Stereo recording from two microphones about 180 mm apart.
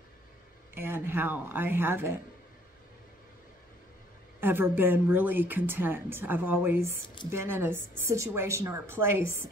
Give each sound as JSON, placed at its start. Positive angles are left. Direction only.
{"t": 0.7, "sound": "speech", "side_deg": -10}
{"t": 4.4, "sound": "speech", "side_deg": -10}